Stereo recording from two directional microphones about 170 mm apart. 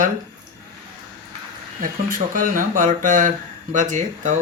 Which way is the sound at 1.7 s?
50° right (ahead or behind).